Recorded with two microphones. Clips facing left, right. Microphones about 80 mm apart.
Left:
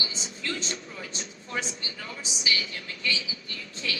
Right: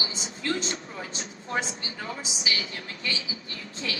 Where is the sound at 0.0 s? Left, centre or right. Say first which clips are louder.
Right 2 dB; right.